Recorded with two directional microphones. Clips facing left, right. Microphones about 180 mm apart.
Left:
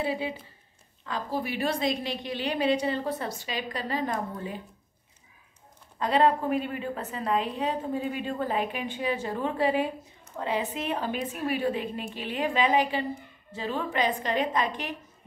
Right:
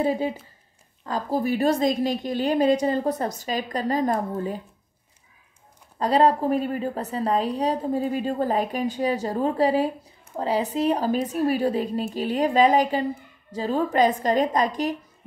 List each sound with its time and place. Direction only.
0.0 s a woman's voice: 45° right (ahead or behind)
5.9 s a woman's voice: 40° right (ahead or behind)